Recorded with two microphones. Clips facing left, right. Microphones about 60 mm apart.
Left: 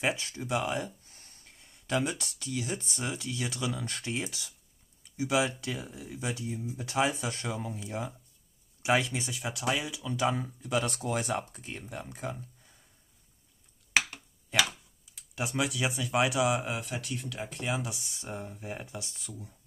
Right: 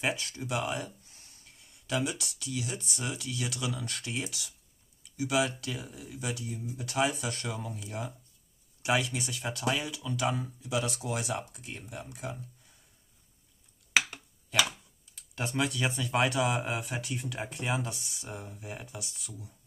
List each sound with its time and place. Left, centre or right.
0.0 s speech: left
1.0 s speech: left
9.4 s speech: centre
10.1 s speech: left
15.1 s speech: centre
18.2 s speech: centre